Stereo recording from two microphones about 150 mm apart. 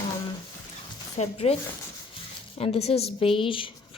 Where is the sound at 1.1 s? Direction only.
40° left (ahead or behind).